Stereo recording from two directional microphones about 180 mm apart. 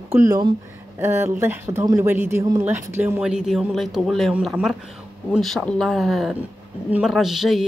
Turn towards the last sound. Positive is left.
turn(degrees=0)  # may be behind; listen again after turning